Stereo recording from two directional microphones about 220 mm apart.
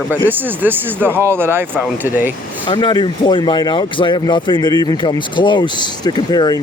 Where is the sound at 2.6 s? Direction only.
20° left (ahead or behind).